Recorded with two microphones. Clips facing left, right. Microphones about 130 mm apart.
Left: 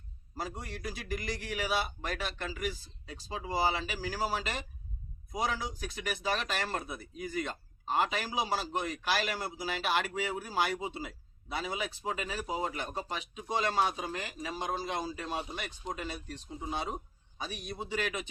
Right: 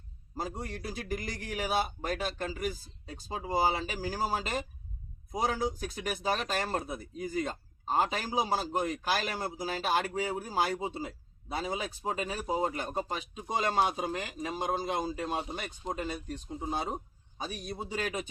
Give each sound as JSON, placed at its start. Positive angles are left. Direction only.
{"t": 0.9, "sound": "a man's voice", "side_deg": -50}
{"t": 6.6, "sound": "a man's voice", "side_deg": -25}